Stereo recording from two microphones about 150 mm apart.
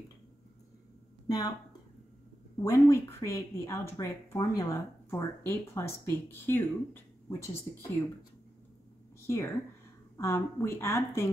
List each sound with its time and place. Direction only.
1.2 s a sound: 25° left (ahead or behind)
2.6 s a woman's voice: 20° left (ahead or behind)
9.2 s a woman's voice: 15° left (ahead or behind)